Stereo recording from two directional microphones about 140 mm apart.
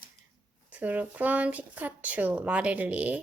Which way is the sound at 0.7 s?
10° right (ahead or behind).